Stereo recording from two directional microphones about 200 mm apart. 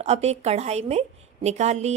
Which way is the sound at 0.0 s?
35° right (ahead or behind).